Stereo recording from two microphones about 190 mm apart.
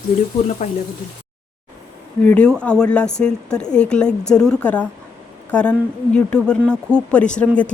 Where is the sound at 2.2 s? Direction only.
5° left (ahead or behind).